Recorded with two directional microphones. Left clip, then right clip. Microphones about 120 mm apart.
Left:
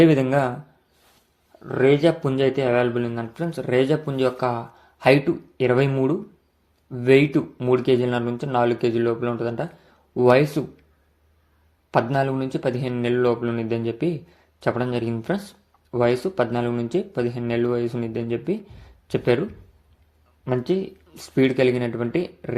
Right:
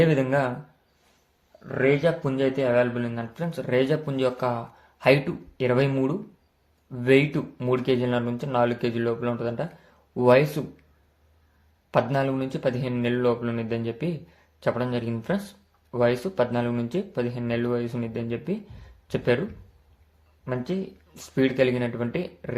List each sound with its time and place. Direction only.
0.0 s speech: 40° left (ahead or behind)
1.8 s speech: 50° left (ahead or behind); by 10.7 s 25° left (ahead or behind)
11.9 s speech: 25° left (ahead or behind)
21.2 s speech: 35° left (ahead or behind)